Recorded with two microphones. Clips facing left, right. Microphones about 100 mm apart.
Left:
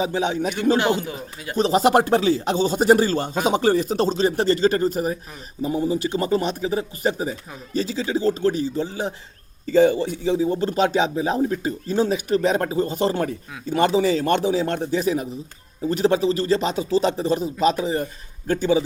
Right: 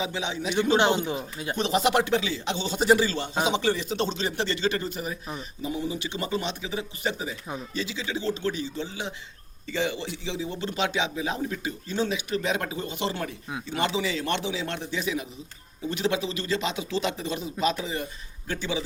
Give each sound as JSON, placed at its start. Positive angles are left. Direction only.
{"t": 0.0, "sound": "speech", "side_deg": 45}
{"t": 0.8, "sound": "speech", "side_deg": -25}
{"t": 1.5, "sound": "speech", "side_deg": 35}